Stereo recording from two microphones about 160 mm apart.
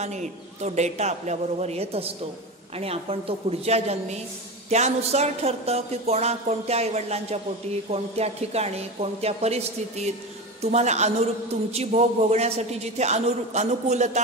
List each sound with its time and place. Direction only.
0.0 s a man's voice: 45° right (ahead or behind)
2.8 s a sound: 40° right (ahead or behind)
10.6 s a man's voice: 45° right (ahead or behind)